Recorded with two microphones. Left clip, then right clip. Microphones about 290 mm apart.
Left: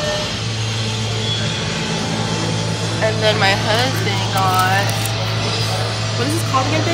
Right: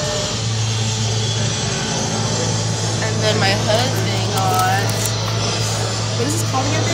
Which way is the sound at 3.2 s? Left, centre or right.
Centre.